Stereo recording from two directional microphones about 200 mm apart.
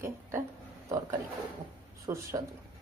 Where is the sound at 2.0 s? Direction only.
15° right (ahead or behind).